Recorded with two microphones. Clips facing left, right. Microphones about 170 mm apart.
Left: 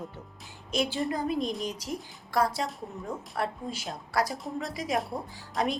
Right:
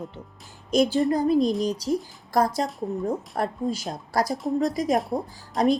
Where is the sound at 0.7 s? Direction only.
40° right (ahead or behind).